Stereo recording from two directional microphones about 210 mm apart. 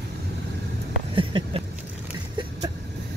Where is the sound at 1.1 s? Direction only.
25° right (ahead or behind).